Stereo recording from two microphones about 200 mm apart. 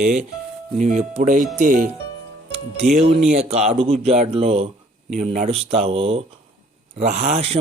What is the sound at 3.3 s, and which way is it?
Speech, 30° right (ahead or behind).